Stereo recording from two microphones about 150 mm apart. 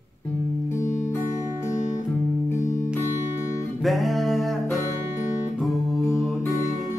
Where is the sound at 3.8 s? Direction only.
Centre (ahead or behind).